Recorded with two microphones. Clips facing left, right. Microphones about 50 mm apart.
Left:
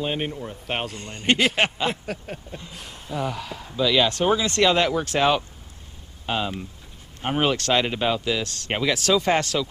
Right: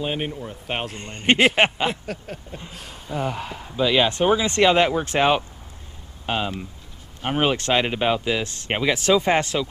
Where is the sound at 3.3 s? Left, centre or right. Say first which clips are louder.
Right 2 dB; right.